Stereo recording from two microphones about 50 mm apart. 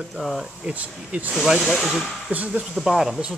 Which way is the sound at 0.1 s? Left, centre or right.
Centre.